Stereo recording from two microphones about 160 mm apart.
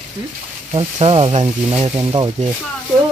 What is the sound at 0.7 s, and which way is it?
Speech, 35° right (ahead or behind).